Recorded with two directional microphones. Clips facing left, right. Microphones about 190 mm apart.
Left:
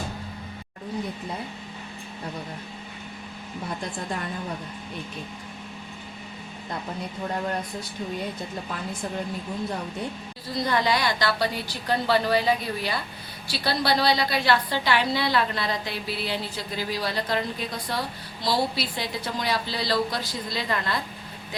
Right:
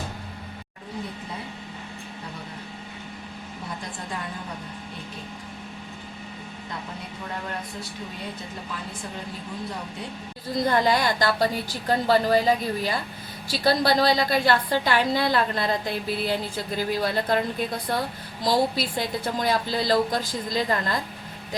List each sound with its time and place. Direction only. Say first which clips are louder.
10.5 s a woman's voice: right 3 dB; 45° right (ahead or behind)